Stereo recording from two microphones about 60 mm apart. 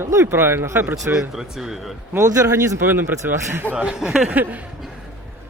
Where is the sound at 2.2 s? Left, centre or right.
Right.